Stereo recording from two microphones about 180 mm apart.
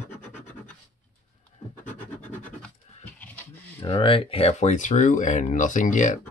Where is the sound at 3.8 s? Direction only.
30° left (ahead or behind); by 6.1 s 45° left (ahead or behind).